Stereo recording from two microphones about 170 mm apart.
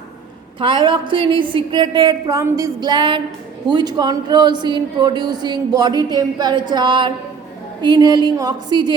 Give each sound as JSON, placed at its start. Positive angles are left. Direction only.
{"t": 0.6, "sound": "speech", "side_deg": -30}